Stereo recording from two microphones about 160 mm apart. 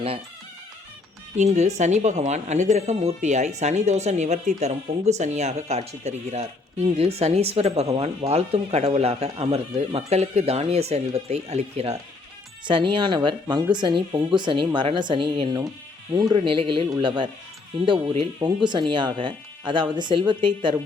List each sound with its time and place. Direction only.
1.4 s speech: 45° right (ahead or behind)
12.6 s speech: 30° right (ahead or behind)